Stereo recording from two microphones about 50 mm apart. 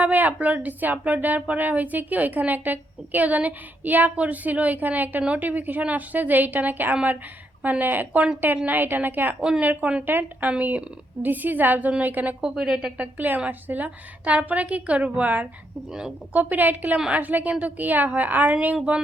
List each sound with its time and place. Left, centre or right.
0.0 s a woman's voice: right
9.6 s a woman's voice: right
10.1 s a woman's voice: right
12.4 s a woman's voice: centre
13.0 s a woman's voice: right
15.9 s a woman's voice: centre
16.3 s a woman's voice: right